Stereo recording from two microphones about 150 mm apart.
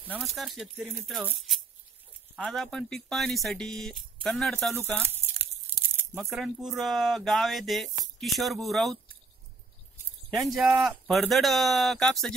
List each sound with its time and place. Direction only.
0.2 s speech: centre (ahead or behind)
2.3 s speech: centre (ahead or behind)
5.0 s a sound: 15° right (ahead or behind)
6.3 s speech: centre (ahead or behind)
10.5 s speech: 5° right (ahead or behind)
11.1 s speech: centre (ahead or behind)